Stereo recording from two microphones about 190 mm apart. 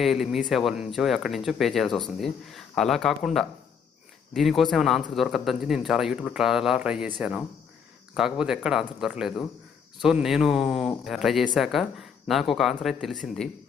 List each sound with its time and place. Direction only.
0.0 s speech: centre (ahead or behind)